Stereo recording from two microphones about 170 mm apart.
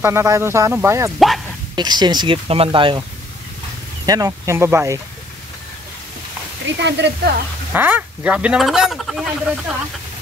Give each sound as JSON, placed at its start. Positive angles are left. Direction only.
{"t": 0.0, "sound": "speech", "side_deg": -15}
{"t": 4.0, "sound": "speech", "side_deg": -20}
{"t": 6.6, "sound": "speech", "side_deg": -90}
{"t": 7.7, "sound": "speech", "side_deg": -10}